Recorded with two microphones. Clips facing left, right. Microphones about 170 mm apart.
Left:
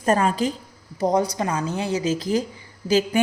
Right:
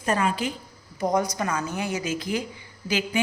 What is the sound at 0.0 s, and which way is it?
A woman's voice, 45° left (ahead or behind).